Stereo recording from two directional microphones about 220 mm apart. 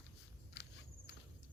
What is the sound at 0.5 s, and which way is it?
Walk, 50° left (ahead or behind).